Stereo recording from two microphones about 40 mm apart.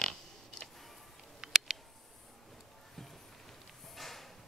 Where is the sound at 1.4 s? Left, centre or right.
Centre.